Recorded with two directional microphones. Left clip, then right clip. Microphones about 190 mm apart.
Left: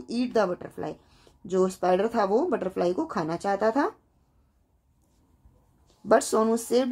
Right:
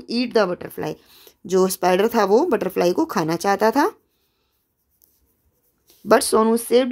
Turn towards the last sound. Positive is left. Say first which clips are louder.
# right 7 dB
turn(degrees=-20)  # may be behind; listen again after turning